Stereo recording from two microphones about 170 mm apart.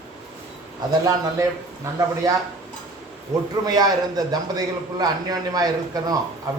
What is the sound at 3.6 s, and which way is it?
Mantra, 25° right (ahead or behind).